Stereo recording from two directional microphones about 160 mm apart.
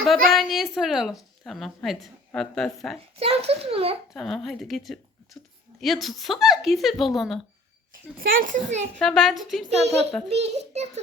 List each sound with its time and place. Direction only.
0.0 s a woman's voice: centre (ahead or behind)
3.2 s a child's voice: 40° right (ahead or behind)
4.1 s a woman's voice: centre (ahead or behind)
8.4 s a child's voice: 50° right (ahead or behind)
9.0 s a woman's voice: 5° left (ahead or behind)
9.6 s a child's voice: 40° right (ahead or behind)